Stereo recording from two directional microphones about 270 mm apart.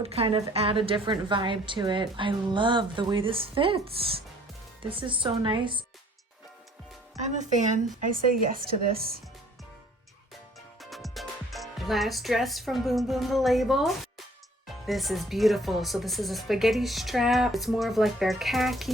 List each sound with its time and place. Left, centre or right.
0.0 s a woman's voice: right
7.2 s a woman's voice: right
10.8 s speech: centre